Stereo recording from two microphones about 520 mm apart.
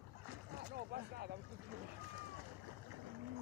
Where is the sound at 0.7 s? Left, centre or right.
Centre.